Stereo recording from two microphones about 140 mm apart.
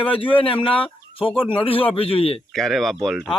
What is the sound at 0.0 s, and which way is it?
A man's voice, 40° left (ahead or behind).